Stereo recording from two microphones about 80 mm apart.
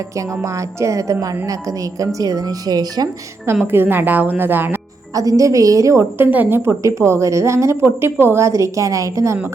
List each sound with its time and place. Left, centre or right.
0.2 s a woman's voice: right
3.4 s speech: right
5.1 s speech: right
6.0 s a woman's voice: right